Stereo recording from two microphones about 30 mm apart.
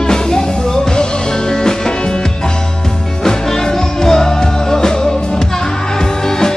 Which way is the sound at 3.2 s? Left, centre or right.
Centre.